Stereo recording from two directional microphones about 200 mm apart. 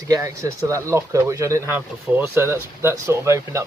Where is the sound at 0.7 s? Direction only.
15° right (ahead or behind).